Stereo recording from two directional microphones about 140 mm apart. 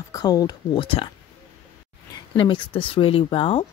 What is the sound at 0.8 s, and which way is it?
Speech, 40° left (ahead or behind).